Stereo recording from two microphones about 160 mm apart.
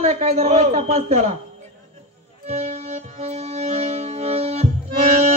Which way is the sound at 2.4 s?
45° right (ahead or behind).